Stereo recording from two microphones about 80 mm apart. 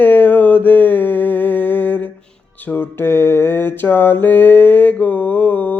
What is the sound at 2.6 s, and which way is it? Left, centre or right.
Mantra, left.